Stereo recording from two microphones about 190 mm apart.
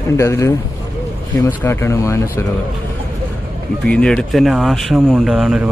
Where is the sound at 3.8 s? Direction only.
5° left (ahead or behind).